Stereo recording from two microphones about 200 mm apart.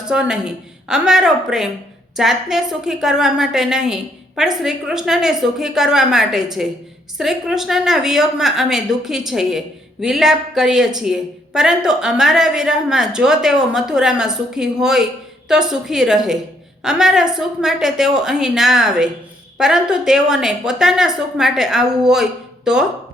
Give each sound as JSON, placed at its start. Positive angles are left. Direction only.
{"t": 0.0, "sound": "a woman's voice", "side_deg": -5}